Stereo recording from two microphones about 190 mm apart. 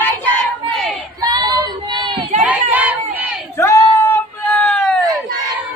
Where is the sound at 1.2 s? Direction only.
20° right (ahead or behind).